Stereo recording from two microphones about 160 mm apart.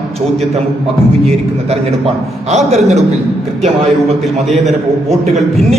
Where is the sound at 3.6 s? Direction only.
40° right (ahead or behind).